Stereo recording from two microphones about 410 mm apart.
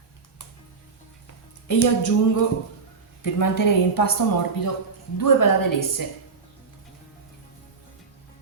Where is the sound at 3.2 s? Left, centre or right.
Left.